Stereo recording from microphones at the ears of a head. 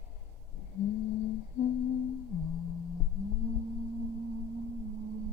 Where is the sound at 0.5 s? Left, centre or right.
Left.